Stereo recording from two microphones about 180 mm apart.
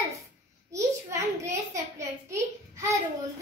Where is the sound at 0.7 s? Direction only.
15° right (ahead or behind).